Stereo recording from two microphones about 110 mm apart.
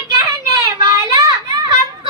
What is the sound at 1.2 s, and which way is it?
Children playing, 35° right (ahead or behind).